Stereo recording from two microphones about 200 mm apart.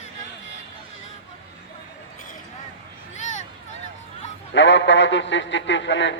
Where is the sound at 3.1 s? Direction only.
35° left (ahead or behind).